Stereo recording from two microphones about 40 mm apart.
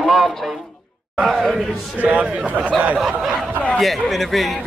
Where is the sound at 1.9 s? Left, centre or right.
Right.